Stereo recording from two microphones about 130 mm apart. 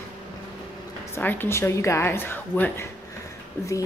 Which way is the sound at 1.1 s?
15° left (ahead or behind).